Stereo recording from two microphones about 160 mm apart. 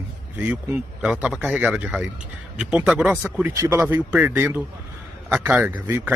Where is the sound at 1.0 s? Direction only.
5° right (ahead or behind).